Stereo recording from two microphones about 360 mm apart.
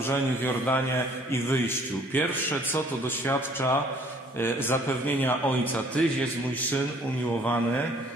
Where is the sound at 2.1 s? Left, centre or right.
Centre.